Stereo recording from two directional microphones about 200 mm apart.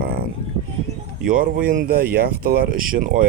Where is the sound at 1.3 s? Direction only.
45° right (ahead or behind).